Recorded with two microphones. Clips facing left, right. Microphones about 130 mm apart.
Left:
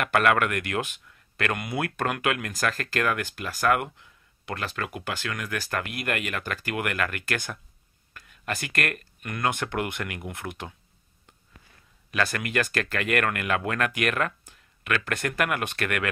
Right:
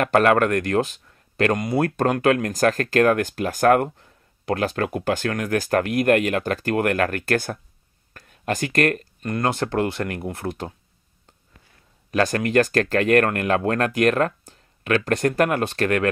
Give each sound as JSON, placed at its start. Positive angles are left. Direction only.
{"t": 0.0, "sound": "speech", "side_deg": -35}
{"t": 12.1, "sound": "speech", "side_deg": -40}